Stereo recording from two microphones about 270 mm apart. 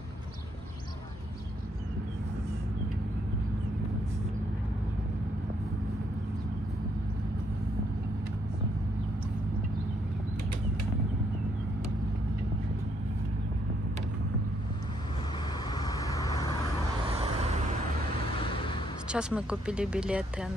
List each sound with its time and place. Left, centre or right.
15.7 s vehicle: centre
19.0 s speech: centre